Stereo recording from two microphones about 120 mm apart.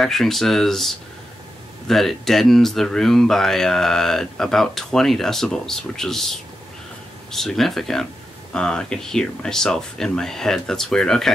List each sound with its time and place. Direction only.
0.0 s speech: centre (ahead or behind)